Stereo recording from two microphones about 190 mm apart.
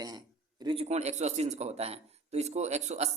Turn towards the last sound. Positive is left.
turn(degrees=-35)  # may be behind; listen again after turning